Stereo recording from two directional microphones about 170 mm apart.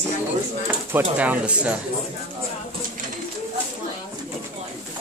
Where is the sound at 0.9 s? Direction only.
10° right (ahead or behind).